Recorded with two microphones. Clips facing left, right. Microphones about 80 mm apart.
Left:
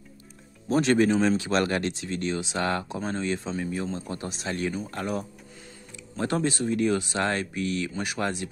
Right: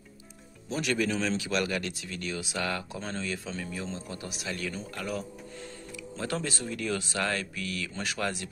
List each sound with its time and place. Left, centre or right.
0.7 s speech: left